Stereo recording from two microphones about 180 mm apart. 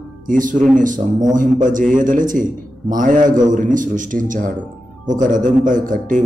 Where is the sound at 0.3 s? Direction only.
45° right (ahead or behind).